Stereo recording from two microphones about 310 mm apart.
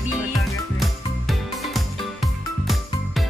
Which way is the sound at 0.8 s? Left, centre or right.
Centre.